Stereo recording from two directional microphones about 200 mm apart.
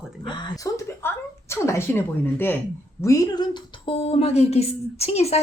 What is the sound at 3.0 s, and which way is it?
Speech, 15° left (ahead or behind).